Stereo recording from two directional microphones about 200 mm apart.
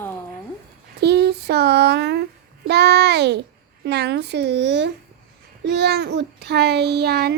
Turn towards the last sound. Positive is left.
turn(degrees=-55)  # may be behind; listen again after turning